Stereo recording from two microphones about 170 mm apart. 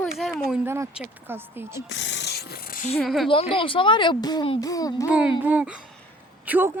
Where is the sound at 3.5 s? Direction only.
30° left (ahead or behind).